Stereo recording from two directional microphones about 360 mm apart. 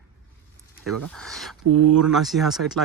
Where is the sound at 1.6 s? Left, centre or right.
Right.